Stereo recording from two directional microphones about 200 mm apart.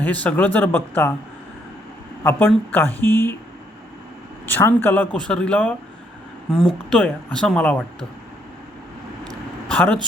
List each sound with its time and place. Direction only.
0.0 s speech: 5° left (ahead or behind)
2.2 s speech: 10° left (ahead or behind)
4.4 s speech: 10° left (ahead or behind)
9.6 s speech: 5° left (ahead or behind)